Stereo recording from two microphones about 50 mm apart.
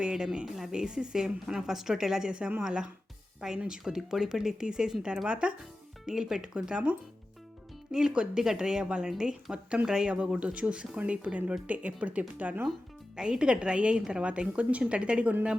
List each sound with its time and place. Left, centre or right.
0.0 s a woman's voice: centre
6.1 s a woman's voice: centre
8.1 s a woman's voice: centre; by 12.6 s right
13.1 s speech: centre